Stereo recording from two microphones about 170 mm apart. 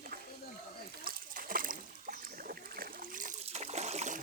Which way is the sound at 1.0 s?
60° right (ahead or behind).